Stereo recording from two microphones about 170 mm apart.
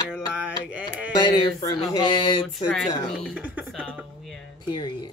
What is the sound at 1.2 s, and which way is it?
Speech, 30° left (ahead or behind).